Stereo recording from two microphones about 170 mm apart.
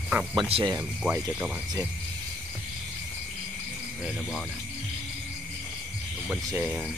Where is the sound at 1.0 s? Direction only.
5° right (ahead or behind).